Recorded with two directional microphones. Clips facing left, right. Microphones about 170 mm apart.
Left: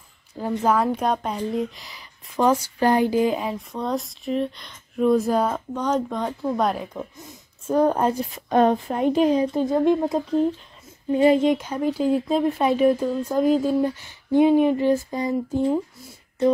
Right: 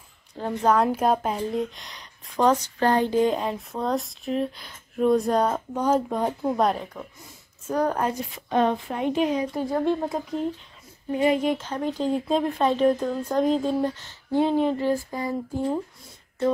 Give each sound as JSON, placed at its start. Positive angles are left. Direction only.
{"t": 0.4, "sound": "speech", "side_deg": 5}
{"t": 5.8, "sound": "speech", "side_deg": -10}
{"t": 7.0, "sound": "speech", "side_deg": 25}
{"t": 8.5, "sound": "speech", "side_deg": 40}
{"t": 9.6, "sound": "speech", "side_deg": 20}
{"t": 11.5, "sound": "speech", "side_deg": 10}